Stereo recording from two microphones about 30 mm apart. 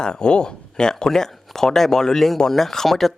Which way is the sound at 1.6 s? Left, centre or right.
Centre.